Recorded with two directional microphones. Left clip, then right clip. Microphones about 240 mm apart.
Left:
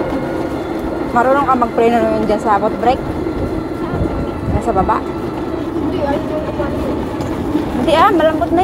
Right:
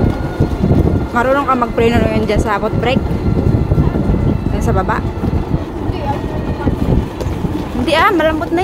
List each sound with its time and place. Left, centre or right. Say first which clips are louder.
1.1 s speech: left 1 dB; right
7.8 s speech: left 1 dB; centre